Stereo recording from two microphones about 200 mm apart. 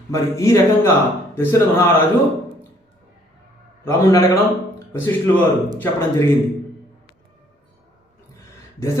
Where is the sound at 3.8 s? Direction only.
15° left (ahead or behind).